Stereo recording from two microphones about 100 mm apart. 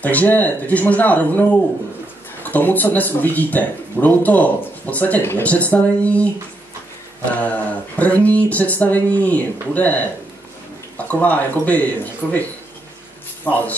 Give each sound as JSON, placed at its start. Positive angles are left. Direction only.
{"t": 0.0, "sound": "speech", "side_deg": 15}
{"t": 7.3, "sound": "speech", "side_deg": 15}
{"t": 12.2, "sound": "speech", "side_deg": 0}
{"t": 13.5, "sound": "speech", "side_deg": 15}